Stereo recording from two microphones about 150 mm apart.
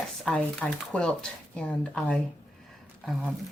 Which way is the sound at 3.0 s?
5° right (ahead or behind).